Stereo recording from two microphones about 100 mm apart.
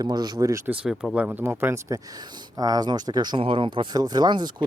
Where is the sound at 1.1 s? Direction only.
15° right (ahead or behind); by 3.3 s 45° right (ahead or behind).